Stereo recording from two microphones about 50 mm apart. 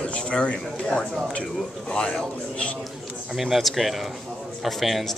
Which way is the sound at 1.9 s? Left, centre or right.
Centre.